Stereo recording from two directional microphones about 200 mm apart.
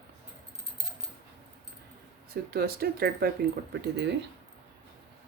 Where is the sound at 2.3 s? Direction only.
50° right (ahead or behind).